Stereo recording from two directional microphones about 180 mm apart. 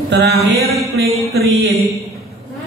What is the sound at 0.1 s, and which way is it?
Mantra, 80° right.